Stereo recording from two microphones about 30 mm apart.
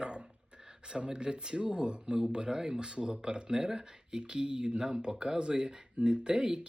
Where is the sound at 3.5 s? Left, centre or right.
Centre.